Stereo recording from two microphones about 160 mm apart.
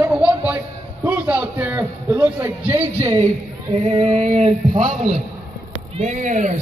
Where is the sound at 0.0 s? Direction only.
10° right (ahead or behind).